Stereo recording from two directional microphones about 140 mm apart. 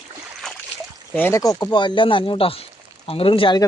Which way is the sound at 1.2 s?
20° left (ahead or behind).